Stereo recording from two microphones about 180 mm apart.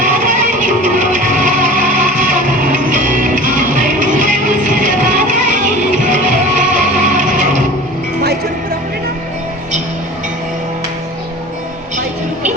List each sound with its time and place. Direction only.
0.0 s music: 45° right (ahead or behind)